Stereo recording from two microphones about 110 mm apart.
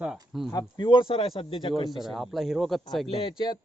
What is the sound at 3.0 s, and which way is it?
Speech, 60° left (ahead or behind).